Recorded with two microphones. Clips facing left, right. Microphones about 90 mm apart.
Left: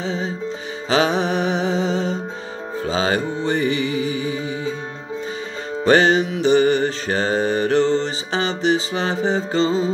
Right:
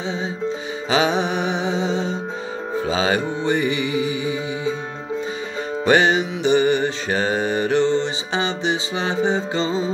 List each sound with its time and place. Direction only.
0.0 s music: 20° right (ahead or behind)
2.9 s music: 30° left (ahead or behind)
3.6 s music: 20° right (ahead or behind)
3.9 s music: 35° left (ahead or behind)
5.9 s music: 20° right (ahead or behind)
7.1 s mantra: 30° left (ahead or behind)
7.3 s mantra: 20° right (ahead or behind)
9.1 s music: 20° right (ahead or behind)